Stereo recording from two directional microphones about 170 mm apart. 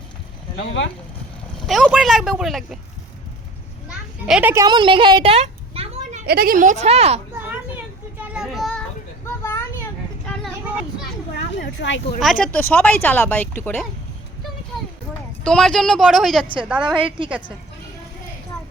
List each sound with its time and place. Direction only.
0.5 s speech: 70° left (ahead or behind)
1.5 s speech: centre (ahead or behind)
3.8 s children playing: 5° right (ahead or behind)
4.5 s a sound: 25° right (ahead or behind); by 6.2 s 40° right (ahead or behind)
6.2 s speech: 65° right (ahead or behind); by 7.2 s 35° right (ahead or behind)
8.2 s children playing: 5° right (ahead or behind); by 10.3 s 10° left (ahead or behind)
11.8 s speech: 90° left
12.2 s speech: 5° left (ahead or behind)
15.4 s speech: 5° left (ahead or behind)